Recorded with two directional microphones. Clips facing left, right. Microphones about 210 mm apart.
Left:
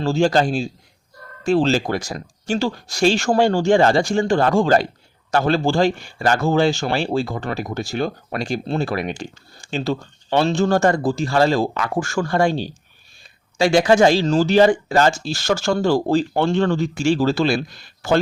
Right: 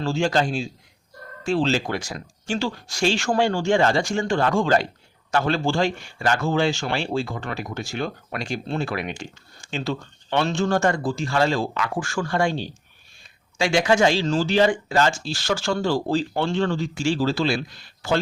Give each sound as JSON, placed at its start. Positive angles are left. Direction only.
{"t": 0.0, "sound": "speech", "side_deg": 35}